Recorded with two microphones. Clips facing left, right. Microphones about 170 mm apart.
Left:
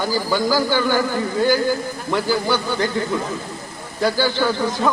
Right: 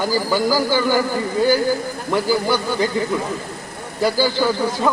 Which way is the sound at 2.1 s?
10° right (ahead or behind).